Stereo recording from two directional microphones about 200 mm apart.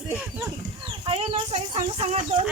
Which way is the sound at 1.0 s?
30° right (ahead or behind).